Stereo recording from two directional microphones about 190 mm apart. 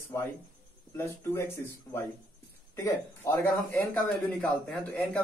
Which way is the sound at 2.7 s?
15° left (ahead or behind).